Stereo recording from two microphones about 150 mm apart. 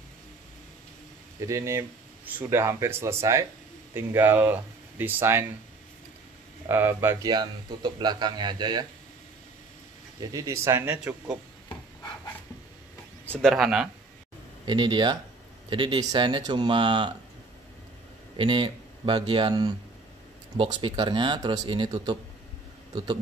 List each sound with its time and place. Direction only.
1.4 s speech: 20° right (ahead or behind)
6.7 s speech: 15° right (ahead or behind)
7.2 s speech: 30° right (ahead or behind)
10.2 s speech: 20° right (ahead or behind)
13.4 s speech: centre (ahead or behind)
14.7 s speech: 30° right (ahead or behind)
18.3 s speech: 35° right (ahead or behind)